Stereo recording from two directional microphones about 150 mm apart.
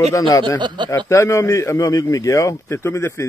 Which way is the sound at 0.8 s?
20° left (ahead or behind).